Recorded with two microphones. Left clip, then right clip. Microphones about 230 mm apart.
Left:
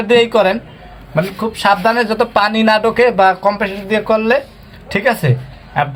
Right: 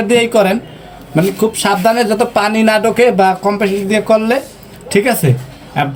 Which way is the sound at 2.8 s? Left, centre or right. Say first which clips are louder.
Even; left.